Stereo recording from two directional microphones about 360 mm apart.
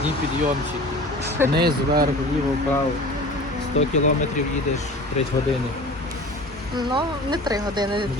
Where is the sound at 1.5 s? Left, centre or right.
Right.